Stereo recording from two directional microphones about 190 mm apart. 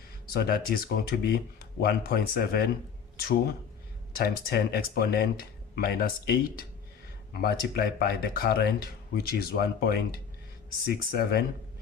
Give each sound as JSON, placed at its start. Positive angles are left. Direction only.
{"t": 0.3, "sound": "speech", "side_deg": 50}